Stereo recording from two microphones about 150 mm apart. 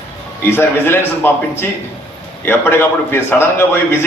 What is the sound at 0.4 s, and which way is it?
Speech, 15° left (ahead or behind).